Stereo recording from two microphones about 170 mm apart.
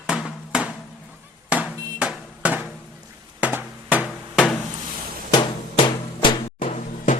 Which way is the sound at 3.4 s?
10° right (ahead or behind).